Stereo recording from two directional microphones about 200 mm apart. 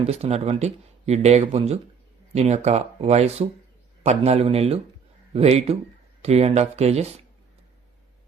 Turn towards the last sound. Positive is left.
turn(degrees=-30)  # may be behind; listen again after turning